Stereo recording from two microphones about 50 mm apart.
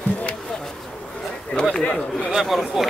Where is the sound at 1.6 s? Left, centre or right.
Centre.